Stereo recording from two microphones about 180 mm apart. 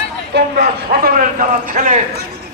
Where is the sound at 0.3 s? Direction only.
60° right (ahead or behind).